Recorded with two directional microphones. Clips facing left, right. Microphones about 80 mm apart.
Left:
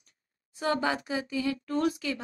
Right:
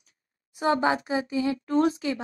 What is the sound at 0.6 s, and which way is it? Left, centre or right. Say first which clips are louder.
Speech: right 5 dB; right.